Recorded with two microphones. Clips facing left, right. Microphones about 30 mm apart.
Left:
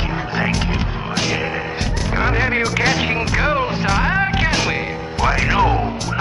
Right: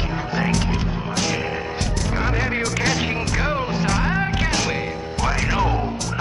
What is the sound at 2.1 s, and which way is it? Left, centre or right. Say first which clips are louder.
Music: left 6 dB; centre.